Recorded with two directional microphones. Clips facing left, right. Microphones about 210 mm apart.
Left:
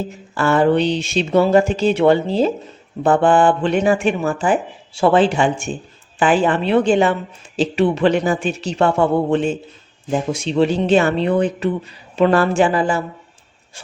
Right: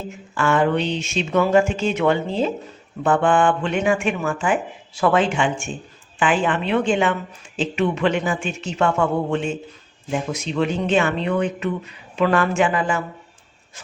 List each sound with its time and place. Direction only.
0.1 s a woman's voice: 35° left (ahead or behind)